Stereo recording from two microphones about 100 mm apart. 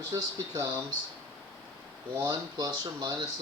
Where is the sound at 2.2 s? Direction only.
40° right (ahead or behind).